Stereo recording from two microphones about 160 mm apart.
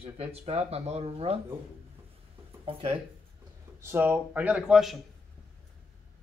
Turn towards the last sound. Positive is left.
turn(degrees=-5)  # may be behind; listen again after turning